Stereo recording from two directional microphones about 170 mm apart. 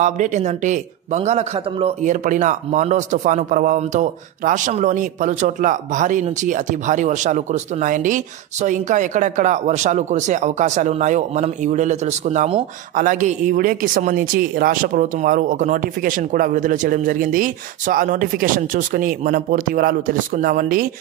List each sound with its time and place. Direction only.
0.0 s a man's voice: 45° right (ahead or behind)
12.9 s a man's voice: 55° right (ahead or behind)